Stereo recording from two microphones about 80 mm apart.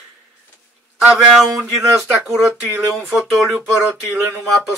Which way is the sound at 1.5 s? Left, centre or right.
Right.